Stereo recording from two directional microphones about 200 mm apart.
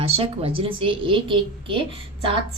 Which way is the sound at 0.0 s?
30° right (ahead or behind).